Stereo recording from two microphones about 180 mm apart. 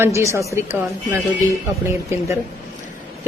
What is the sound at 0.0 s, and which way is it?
Speech, 15° right (ahead or behind).